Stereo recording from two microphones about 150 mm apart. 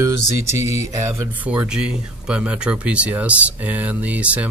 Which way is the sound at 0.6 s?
50° left (ahead or behind).